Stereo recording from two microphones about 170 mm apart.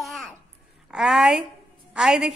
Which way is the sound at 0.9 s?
Centre (ahead or behind).